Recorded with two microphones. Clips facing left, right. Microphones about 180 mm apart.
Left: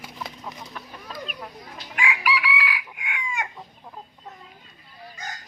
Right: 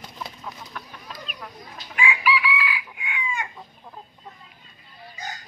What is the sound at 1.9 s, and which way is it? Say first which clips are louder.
Chicken: right 2 dB; 75° left (ahead or behind).